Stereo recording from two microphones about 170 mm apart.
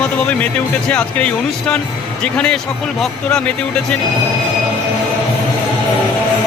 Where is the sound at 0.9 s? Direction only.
5° left (ahead or behind).